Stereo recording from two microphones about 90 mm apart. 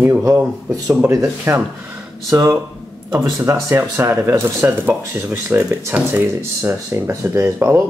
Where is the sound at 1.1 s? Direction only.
35° right (ahead or behind).